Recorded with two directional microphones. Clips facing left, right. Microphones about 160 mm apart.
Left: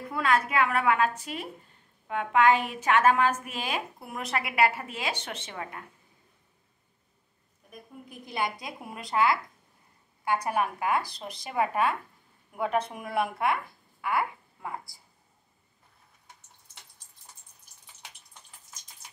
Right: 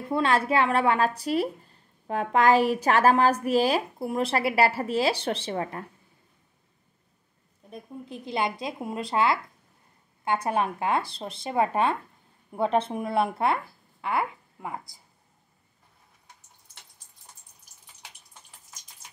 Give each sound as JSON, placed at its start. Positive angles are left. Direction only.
{"t": 0.1, "sound": "a woman's voice", "side_deg": -30}
{"t": 7.7, "sound": "speech", "side_deg": -20}